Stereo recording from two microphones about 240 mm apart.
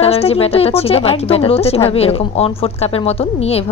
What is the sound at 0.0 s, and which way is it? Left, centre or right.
A woman's voice, left.